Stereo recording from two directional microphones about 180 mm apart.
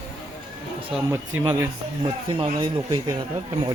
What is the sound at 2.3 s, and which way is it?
Speech, 30° right (ahead or behind).